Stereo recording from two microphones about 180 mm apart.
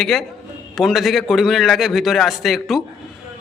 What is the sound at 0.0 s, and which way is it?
A man's voice, centre (ahead or behind).